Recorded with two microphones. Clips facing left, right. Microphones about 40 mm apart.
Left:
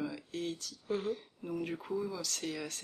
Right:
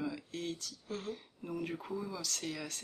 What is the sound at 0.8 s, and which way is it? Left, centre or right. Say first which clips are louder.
Speech: left 8 dB; left.